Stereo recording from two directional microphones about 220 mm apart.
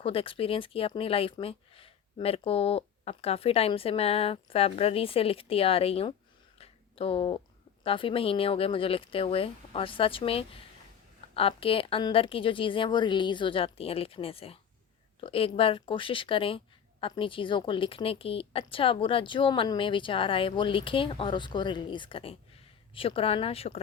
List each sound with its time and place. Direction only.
0.0 s a woman's voice: 25° left (ahead or behind)
6.6 s a sound: 25° left (ahead or behind)
7.9 s a woman's voice: 25° left (ahead or behind)